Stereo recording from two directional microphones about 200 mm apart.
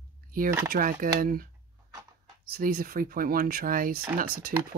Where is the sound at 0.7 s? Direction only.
45° right (ahead or behind).